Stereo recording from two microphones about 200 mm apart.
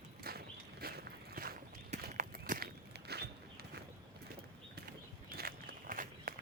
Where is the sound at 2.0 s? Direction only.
40° right (ahead or behind).